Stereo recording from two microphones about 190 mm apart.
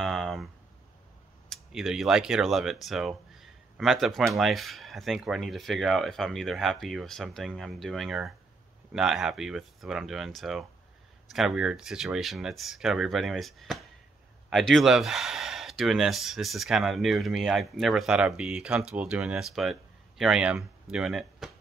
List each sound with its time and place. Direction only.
0.0 s speech: centre (ahead or behind)
1.5 s speech: centre (ahead or behind)